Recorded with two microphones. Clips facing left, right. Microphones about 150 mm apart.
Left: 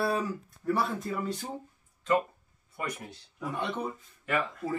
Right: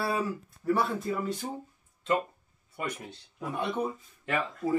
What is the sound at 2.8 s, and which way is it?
Speech, 25° right (ahead or behind).